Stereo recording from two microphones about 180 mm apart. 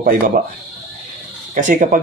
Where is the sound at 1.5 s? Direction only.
45° right (ahead or behind).